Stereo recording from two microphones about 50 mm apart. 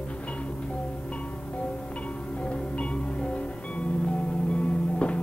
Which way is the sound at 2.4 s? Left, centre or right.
Left.